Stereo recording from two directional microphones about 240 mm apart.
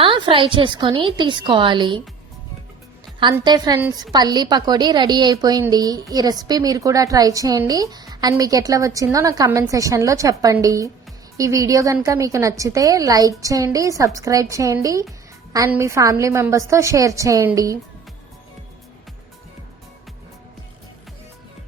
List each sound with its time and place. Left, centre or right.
0.0 s a woman's voice: right
3.2 s a woman's voice: centre